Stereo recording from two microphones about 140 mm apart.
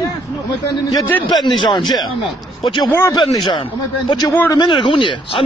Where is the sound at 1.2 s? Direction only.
30° left (ahead or behind).